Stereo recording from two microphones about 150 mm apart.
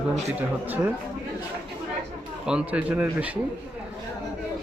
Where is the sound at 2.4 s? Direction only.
5° right (ahead or behind).